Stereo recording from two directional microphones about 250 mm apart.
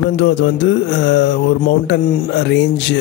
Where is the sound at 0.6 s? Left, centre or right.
Left.